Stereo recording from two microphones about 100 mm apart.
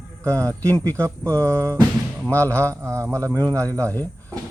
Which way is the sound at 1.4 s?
30° right (ahead or behind).